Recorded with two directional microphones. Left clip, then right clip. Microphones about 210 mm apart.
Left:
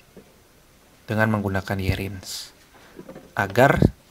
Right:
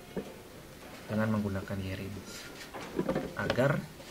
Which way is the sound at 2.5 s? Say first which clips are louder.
Right 8 dB; centre (ahead or behind).